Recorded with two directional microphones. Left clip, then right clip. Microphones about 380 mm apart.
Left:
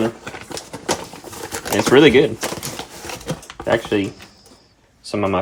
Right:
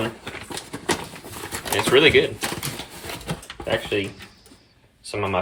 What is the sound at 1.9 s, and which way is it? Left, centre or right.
Speech, centre.